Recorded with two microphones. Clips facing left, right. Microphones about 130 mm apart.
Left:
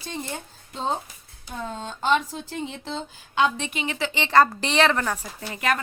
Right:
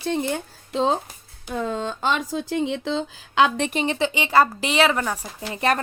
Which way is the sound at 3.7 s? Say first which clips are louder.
Right 6 dB; 35° right (ahead or behind).